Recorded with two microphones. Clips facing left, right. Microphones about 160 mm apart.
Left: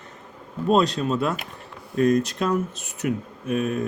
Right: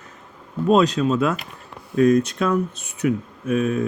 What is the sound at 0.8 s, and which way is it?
Speech, 35° left (ahead or behind).